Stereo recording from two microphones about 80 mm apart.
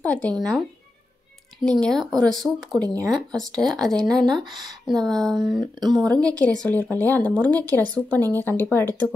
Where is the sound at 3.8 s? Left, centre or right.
Right.